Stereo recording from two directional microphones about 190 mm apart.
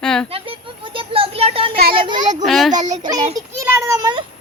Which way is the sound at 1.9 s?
25° right (ahead or behind).